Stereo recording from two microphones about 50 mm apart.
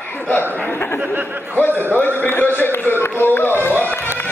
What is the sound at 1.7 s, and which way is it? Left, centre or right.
Speech, right.